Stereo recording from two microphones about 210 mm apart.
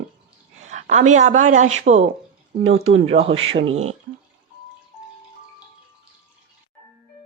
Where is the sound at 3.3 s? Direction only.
70° right (ahead or behind).